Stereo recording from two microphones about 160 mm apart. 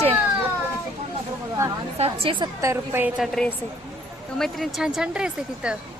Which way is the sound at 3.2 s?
5° left (ahead or behind).